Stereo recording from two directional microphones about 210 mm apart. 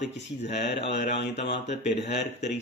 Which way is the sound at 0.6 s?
55° left (ahead or behind).